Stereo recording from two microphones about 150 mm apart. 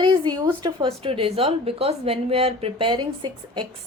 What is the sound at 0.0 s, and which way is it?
A woman's voice, 30° right (ahead or behind).